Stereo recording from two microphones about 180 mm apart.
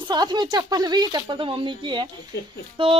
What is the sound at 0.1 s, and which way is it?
Speech, 25° right (ahead or behind).